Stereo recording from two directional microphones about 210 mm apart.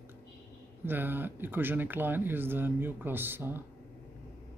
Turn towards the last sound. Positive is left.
turn(degrees=-10)  # may be behind; listen again after turning